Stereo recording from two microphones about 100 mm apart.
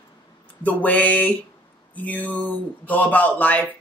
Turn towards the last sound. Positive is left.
turn(degrees=15)  # may be behind; listen again after turning